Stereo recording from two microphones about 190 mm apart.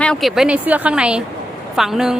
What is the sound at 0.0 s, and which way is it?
A woman's voice, centre (ahead or behind).